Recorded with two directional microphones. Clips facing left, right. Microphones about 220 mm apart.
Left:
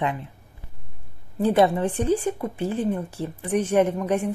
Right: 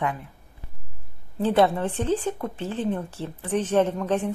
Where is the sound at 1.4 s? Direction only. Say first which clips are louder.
Left 1 dB; 15° left (ahead or behind).